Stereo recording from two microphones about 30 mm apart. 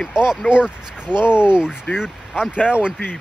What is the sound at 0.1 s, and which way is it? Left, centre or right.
Speech, right.